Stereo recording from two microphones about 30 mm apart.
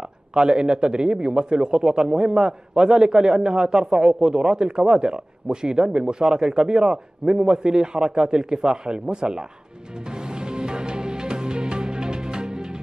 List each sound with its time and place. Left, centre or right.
0.3 s a man's voice: right
10.3 s music: right